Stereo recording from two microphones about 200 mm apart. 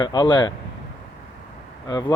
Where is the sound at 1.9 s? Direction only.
20° left (ahead or behind).